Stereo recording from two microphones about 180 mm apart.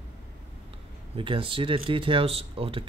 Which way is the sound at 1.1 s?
30° right (ahead or behind).